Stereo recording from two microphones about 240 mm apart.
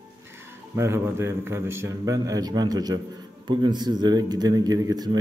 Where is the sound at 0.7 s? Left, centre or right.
Centre.